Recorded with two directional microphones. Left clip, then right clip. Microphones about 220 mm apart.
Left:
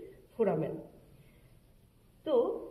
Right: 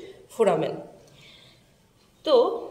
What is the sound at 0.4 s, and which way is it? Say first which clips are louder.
Speech: right 9 dB; 20° right (ahead or behind).